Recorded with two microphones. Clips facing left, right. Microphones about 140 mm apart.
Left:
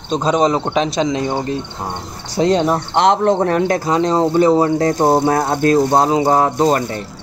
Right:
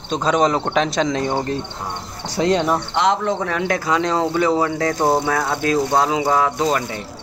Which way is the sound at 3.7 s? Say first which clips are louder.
Left 4 dB; 35° left (ahead or behind).